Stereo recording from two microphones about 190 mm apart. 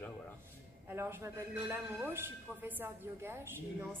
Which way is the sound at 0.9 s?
15° right (ahead or behind).